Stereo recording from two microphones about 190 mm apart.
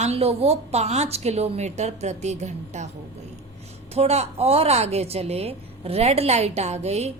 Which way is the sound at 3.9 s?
35° right (ahead or behind).